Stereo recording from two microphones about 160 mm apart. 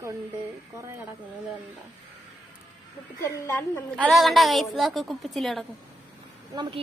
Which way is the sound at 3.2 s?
15° left (ahead or behind).